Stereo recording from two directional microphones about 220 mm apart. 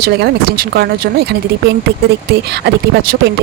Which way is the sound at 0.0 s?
45° right (ahead or behind).